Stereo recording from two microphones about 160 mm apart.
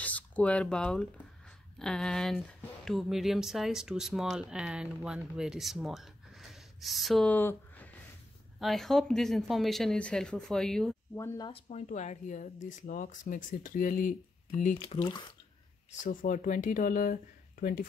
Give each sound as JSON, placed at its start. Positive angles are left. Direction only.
{"t": 0.0, "sound": "speech", "side_deg": 10}
{"t": 7.3, "sound": "a sound", "side_deg": 10}
{"t": 8.5, "sound": "speech", "side_deg": 0}
{"t": 11.1, "sound": "speech", "side_deg": 15}
{"t": 11.4, "sound": "speech", "side_deg": 35}
{"t": 11.8, "sound": "speech", "side_deg": 50}
{"t": 16.0, "sound": "speech", "side_deg": 55}